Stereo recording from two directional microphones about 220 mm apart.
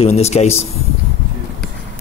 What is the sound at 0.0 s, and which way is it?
Speech, 30° left (ahead or behind).